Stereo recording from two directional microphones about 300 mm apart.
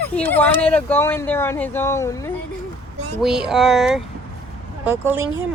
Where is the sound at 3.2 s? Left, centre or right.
Centre.